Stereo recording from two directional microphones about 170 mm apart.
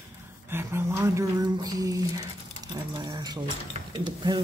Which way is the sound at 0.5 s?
15° right (ahead or behind).